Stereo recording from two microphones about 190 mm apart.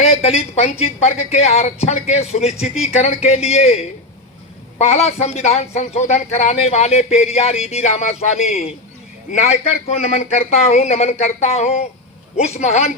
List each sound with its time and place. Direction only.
0.0 s speech: 35° left (ahead or behind)
4.8 s speech: 35° left (ahead or behind)